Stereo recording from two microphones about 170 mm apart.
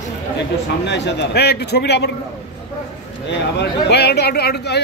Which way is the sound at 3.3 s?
85° left.